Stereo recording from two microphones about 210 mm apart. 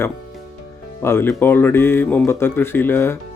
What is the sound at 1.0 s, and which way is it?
Speech, 10° left (ahead or behind).